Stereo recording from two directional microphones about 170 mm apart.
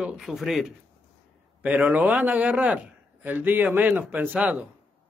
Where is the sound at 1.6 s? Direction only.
10° right (ahead or behind).